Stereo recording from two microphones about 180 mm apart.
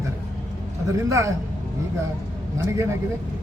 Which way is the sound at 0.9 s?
15° right (ahead or behind).